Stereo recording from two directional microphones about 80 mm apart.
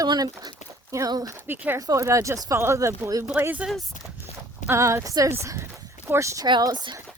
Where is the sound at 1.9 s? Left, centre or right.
Right.